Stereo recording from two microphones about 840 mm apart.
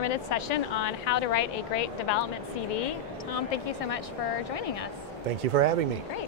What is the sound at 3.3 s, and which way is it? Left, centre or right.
Speech, left.